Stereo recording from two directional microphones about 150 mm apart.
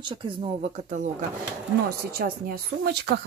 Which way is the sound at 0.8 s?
50° right (ahead or behind).